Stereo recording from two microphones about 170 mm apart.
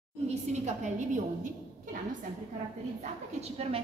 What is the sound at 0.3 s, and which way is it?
A woman's voice, 45° right (ahead or behind).